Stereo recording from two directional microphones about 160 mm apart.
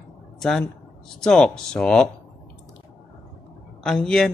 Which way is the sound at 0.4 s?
Centre (ahead or behind).